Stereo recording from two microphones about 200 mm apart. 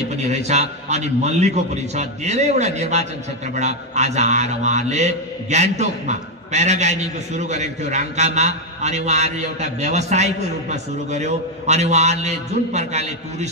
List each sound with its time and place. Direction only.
0.1 s a man's voice: 35° right (ahead or behind)